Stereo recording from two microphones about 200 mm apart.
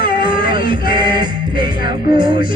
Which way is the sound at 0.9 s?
25° right (ahead or behind).